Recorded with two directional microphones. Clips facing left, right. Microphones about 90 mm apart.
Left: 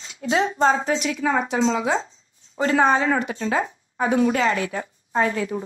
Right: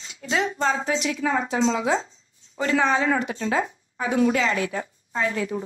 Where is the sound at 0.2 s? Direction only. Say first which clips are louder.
Left 4 dB; 35° left (ahead or behind).